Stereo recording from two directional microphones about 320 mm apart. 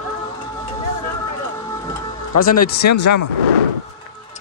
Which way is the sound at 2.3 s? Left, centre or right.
Left.